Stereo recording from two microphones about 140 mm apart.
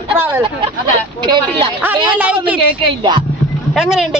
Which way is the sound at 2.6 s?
35° right (ahead or behind).